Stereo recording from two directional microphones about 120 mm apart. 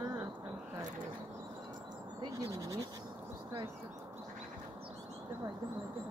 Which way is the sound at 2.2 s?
30° right (ahead or behind).